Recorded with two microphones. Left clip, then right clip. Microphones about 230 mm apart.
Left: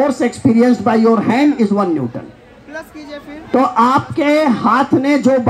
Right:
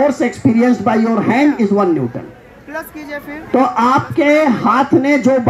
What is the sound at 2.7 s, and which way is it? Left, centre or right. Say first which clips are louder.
Speech: right 4 dB; right.